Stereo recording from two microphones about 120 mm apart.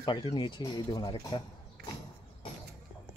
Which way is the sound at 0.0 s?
40° left (ahead or behind).